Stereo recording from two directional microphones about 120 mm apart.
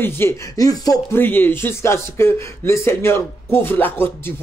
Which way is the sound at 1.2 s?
15° left (ahead or behind).